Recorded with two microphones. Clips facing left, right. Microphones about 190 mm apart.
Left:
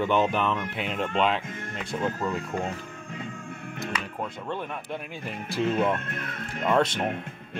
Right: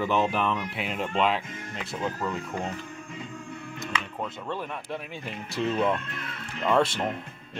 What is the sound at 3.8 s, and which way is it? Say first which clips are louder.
Music: left 1 dB; centre (ahead or behind).